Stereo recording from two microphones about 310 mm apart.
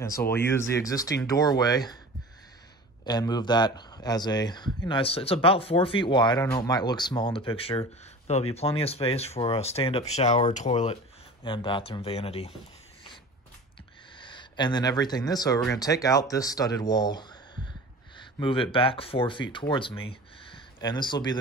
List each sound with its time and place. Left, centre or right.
0.3 s speech: centre
3.1 s speech: centre
14.1 s speech: centre
18.4 s speech: centre